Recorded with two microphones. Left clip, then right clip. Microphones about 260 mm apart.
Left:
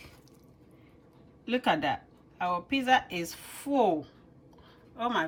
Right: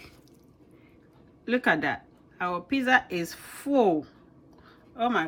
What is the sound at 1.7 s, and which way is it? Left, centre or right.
Speech, centre.